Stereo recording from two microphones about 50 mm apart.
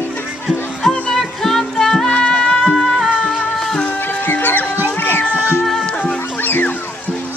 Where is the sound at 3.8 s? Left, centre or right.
Left.